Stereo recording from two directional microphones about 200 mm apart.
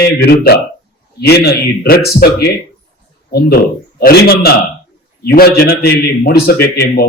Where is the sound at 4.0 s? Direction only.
50° left (ahead or behind).